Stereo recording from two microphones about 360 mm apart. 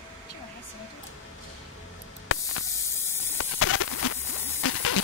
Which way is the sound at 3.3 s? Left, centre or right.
Left.